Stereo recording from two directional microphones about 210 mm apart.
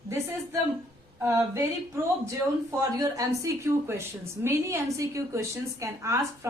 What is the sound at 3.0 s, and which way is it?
A woman's voice, 15° right (ahead or behind).